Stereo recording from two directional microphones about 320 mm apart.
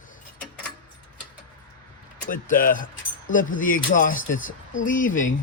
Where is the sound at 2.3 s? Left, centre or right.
Left.